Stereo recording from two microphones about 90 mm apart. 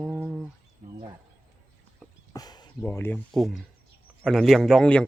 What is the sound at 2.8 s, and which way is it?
Speech, 25° left (ahead or behind).